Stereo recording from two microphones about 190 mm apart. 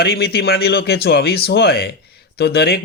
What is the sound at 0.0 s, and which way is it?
Speech, 55° left (ahead or behind).